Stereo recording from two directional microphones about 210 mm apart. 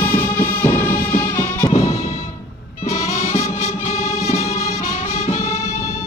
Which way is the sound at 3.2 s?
35° left (ahead or behind).